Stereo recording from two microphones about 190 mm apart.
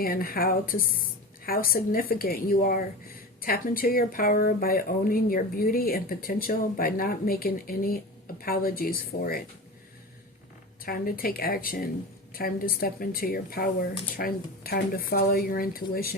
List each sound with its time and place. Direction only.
0.0 s a woman's voice: 50° left (ahead or behind)
10.8 s a woman's voice: 50° left (ahead or behind)